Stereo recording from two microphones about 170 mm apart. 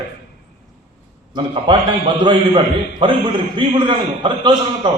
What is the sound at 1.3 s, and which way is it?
A man's voice, 30° right (ahead or behind).